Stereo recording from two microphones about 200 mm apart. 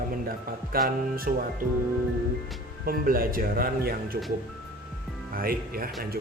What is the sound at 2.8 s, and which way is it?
Speech, 45° right (ahead or behind).